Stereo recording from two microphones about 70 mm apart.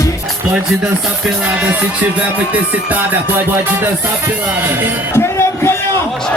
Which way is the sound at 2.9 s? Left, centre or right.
Right.